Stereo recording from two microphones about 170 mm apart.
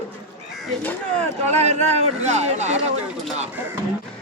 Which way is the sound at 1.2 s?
40° right (ahead or behind).